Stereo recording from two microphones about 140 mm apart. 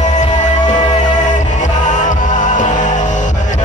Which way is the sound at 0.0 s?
60° left (ahead or behind).